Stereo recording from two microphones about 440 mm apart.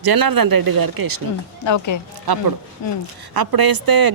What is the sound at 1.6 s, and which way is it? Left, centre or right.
Speech, left.